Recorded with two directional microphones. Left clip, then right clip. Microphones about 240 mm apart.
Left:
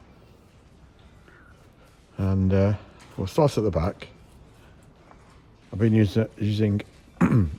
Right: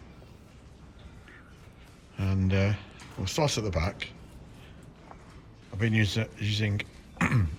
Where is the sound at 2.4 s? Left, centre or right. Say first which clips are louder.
Left 6 dB; left.